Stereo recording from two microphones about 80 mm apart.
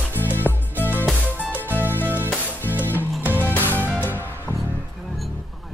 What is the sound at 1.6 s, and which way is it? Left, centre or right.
Music, right.